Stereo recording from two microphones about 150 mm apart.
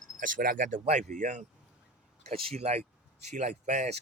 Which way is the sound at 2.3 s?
45° right (ahead or behind).